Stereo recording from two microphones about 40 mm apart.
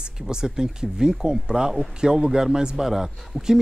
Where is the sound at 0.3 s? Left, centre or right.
Centre.